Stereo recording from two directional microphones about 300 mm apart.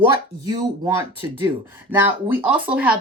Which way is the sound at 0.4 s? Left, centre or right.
Centre.